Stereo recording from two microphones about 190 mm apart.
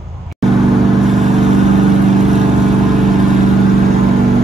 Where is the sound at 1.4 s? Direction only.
35° right (ahead or behind).